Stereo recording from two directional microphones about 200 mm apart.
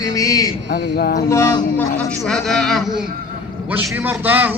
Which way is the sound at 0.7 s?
50° left (ahead or behind).